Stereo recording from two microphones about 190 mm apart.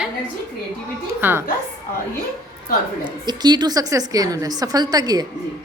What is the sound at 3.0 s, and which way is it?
A woman's voice, 20° right (ahead or behind).